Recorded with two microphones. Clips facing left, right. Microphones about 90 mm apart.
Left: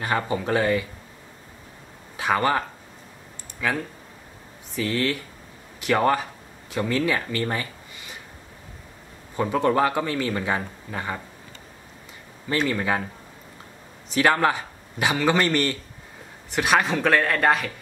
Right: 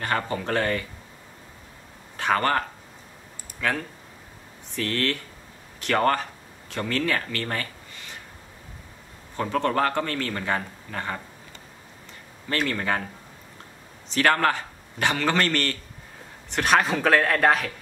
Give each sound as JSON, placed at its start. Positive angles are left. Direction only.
{"t": 0.0, "sound": "speech", "side_deg": 10}
{"t": 2.1, "sound": "speech", "side_deg": 5}
{"t": 3.6, "sound": "speech", "side_deg": 5}
{"t": 9.4, "sound": "speech", "side_deg": 10}
{"t": 12.4, "sound": "speech", "side_deg": 10}
{"t": 14.1, "sound": "speech", "side_deg": 10}
{"t": 16.4, "sound": "speech", "side_deg": 5}